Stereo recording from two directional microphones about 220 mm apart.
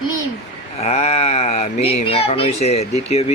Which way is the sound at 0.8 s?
30° left (ahead or behind).